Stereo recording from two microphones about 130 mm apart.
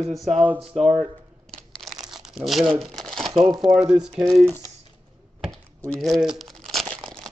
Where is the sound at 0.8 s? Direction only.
55° right (ahead or behind).